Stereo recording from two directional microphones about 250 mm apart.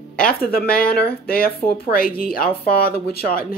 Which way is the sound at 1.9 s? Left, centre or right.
Left.